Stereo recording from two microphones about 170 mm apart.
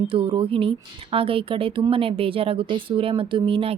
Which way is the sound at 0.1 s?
30° right (ahead or behind).